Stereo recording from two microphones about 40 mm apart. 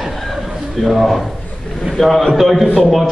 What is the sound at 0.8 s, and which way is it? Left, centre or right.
A man's voice, centre.